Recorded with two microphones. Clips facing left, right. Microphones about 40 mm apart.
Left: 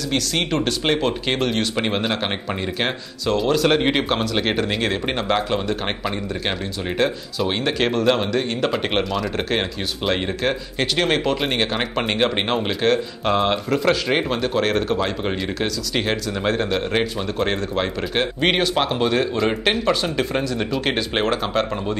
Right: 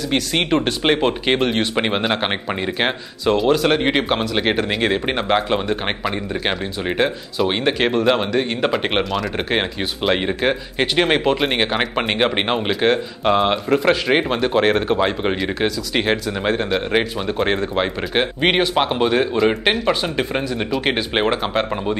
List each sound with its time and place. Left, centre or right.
0.1 s speech: right
3.4 s speech: centre
7.0 s speech: centre